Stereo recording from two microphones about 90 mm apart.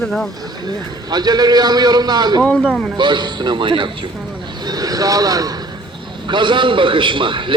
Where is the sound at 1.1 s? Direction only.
50° right (ahead or behind).